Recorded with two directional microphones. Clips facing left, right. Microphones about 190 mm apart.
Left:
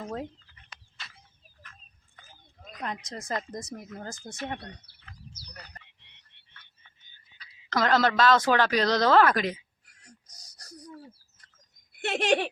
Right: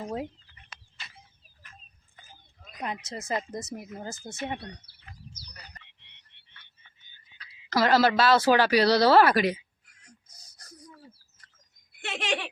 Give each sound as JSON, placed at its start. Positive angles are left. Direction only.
{"t": 0.0, "sound": "speech", "side_deg": -10}
{"t": 2.8, "sound": "speech", "side_deg": -5}
{"t": 7.7, "sound": "speech", "side_deg": -5}
{"t": 12.0, "sound": "speech", "side_deg": 55}